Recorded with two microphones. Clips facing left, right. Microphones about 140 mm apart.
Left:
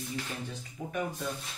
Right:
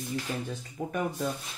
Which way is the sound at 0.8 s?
45° right (ahead or behind).